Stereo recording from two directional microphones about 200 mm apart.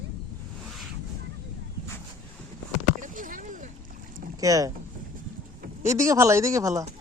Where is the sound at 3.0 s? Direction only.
40° right (ahead or behind).